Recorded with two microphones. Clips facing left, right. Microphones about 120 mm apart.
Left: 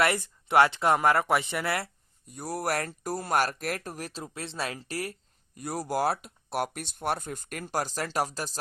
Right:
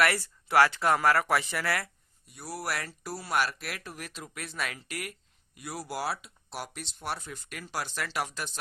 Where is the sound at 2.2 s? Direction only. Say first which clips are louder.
Left 5 dB; 45° left (ahead or behind).